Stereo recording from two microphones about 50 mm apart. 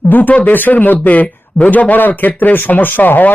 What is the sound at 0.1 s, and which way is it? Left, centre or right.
Speech, left.